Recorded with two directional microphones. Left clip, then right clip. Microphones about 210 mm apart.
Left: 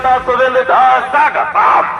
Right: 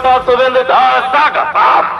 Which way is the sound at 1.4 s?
40° left (ahead or behind).